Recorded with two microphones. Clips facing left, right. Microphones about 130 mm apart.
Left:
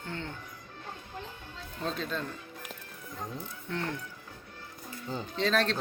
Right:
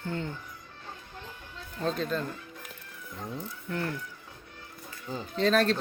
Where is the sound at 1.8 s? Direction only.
Centre (ahead or behind).